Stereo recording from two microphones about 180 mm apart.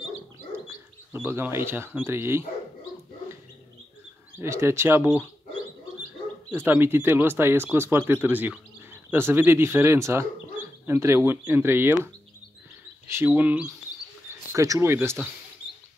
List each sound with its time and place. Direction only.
1.1 s speech: 10° right (ahead or behind)
4.4 s speech: 15° right (ahead or behind)
6.5 s speech: 10° right (ahead or behind)
13.1 s speech: 10° right (ahead or behind)